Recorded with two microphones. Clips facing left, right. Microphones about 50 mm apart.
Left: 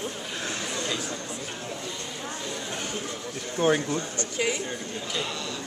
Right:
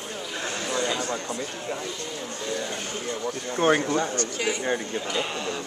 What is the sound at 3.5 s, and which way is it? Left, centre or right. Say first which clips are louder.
Speech: right 2 dB; right.